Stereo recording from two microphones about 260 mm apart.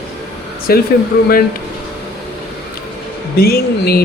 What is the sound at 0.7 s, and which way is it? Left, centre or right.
Speech, left.